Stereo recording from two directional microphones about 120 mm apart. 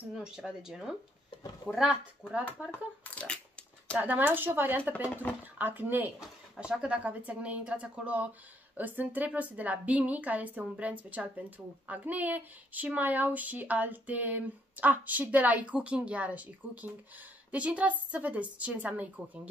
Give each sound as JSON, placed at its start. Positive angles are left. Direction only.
{"t": 0.2, "sound": "speech", "side_deg": -5}
{"t": 2.7, "sound": "speech", "side_deg": 10}
{"t": 4.0, "sound": "speech", "side_deg": -15}
{"t": 6.2, "sound": "speech", "side_deg": -5}